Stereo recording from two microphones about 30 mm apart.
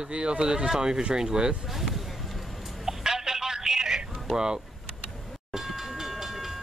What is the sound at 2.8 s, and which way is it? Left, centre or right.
Telephone, centre.